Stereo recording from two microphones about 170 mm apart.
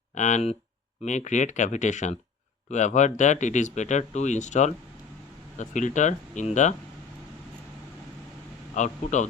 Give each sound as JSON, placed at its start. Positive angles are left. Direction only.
{"t": 0.2, "sound": "speech", "side_deg": 45}
{"t": 8.7, "sound": "speech", "side_deg": 45}